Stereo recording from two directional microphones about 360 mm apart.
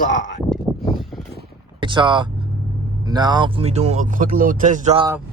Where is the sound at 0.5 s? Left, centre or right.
Centre.